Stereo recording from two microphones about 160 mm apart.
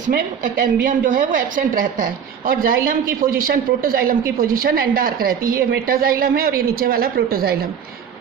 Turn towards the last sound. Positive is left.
turn(degrees=-70)  # may be behind; listen again after turning